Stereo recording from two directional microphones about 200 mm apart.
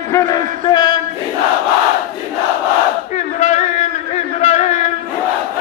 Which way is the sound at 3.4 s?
35° left (ahead or behind).